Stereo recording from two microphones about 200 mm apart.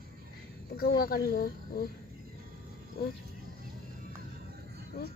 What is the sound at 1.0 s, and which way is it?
Speech, 50° left (ahead or behind).